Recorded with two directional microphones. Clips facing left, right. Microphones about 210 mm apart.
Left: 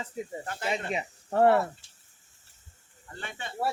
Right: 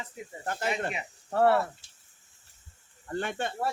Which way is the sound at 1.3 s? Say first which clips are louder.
Left 2 dB; 20° left (ahead or behind).